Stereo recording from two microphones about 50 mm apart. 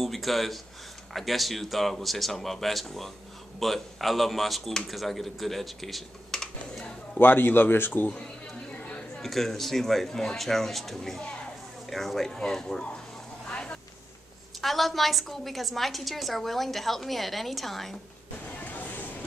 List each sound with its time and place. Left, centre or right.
0.0 s a woman's voice: centre
7.2 s speech: left
9.2 s a woman's voice: centre
13.5 s vehicle: left
14.6 s a woman's voice: centre
18.6 s a sound: left